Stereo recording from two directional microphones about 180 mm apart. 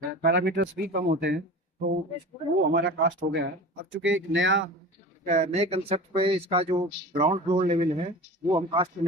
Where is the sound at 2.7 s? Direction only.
80° right.